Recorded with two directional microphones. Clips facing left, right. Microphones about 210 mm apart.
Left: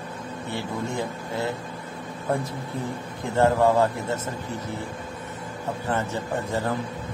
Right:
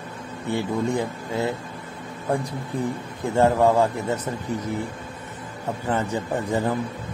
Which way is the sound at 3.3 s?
15° right (ahead or behind).